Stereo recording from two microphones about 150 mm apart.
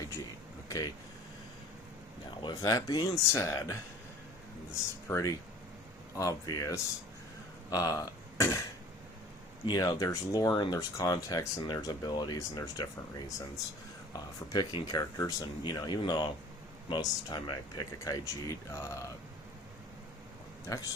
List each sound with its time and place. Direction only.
2.4 s speech: 25° left (ahead or behind)
9.6 s speech: 25° left (ahead or behind)
20.7 s speech: 25° left (ahead or behind)